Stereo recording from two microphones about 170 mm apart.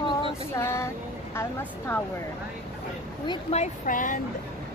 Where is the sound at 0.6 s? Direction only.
15° left (ahead or behind).